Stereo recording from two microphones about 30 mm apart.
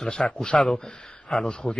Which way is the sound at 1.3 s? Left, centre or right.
Centre.